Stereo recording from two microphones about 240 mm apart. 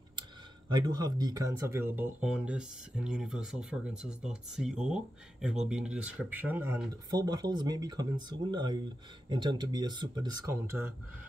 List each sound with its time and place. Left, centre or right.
0.7 s speech: centre